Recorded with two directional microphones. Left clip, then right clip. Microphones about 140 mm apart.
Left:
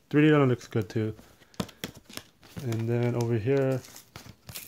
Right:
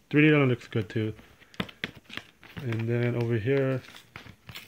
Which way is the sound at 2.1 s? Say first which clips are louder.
Right 3 dB; 70° left (ahead or behind).